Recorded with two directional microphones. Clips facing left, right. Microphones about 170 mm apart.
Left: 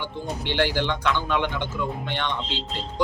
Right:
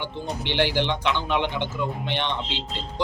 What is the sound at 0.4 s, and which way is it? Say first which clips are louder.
Speech: even; 15° right (ahead or behind).